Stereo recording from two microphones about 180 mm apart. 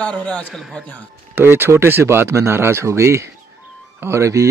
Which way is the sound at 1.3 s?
10° right (ahead or behind).